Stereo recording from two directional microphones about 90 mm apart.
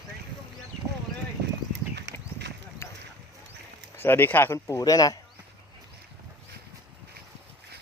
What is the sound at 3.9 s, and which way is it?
Speech, 25° left (ahead or behind).